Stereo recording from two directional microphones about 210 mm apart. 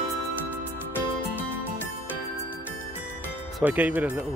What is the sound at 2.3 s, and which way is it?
Music, 10° left (ahead or behind).